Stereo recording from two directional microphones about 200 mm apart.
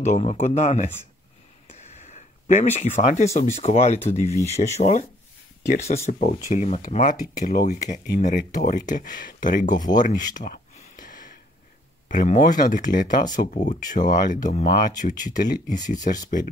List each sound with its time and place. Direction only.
0.0 s speech: 35° left (ahead or behind)
1.7 s a sound: 35° left (ahead or behind)
3.0 s speech: 35° left (ahead or behind)
6.0 s speech: 35° left (ahead or behind)
9.9 s a sound: 40° left (ahead or behind)
12.1 s speech: 40° left (ahead or behind)